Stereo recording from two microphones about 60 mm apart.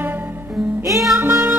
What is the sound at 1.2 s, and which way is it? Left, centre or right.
Music, right.